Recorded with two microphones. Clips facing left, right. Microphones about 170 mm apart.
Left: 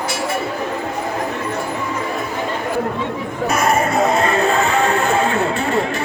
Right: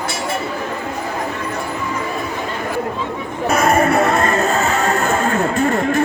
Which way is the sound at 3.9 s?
65° right (ahead or behind).